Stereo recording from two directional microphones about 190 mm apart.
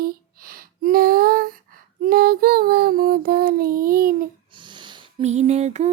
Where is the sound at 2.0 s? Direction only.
50° right (ahead or behind).